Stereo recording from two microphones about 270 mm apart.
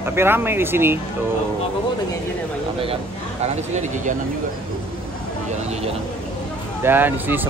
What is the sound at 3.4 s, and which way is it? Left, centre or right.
Speech, right.